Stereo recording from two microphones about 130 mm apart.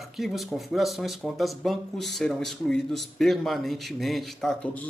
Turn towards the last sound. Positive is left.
turn(degrees=5)  # may be behind; listen again after turning